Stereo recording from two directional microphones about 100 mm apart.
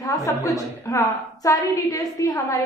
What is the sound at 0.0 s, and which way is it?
A woman's voice, 35° left (ahead or behind).